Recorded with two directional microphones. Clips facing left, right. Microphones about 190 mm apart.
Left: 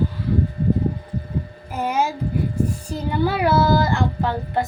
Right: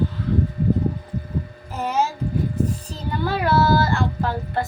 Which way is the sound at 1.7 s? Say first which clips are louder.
Left 1 dB; 10° left (ahead or behind).